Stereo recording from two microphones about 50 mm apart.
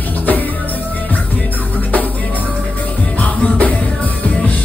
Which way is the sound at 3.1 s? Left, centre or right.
Left.